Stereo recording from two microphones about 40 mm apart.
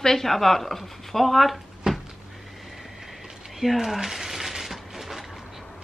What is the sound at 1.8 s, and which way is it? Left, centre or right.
Cupboard open or close, right.